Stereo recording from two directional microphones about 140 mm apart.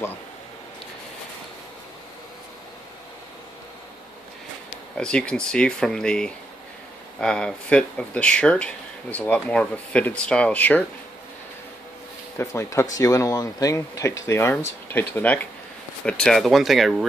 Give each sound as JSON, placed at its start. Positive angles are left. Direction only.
{"t": 4.9, "sound": "speech", "side_deg": 5}
{"t": 12.4, "sound": "speech", "side_deg": 20}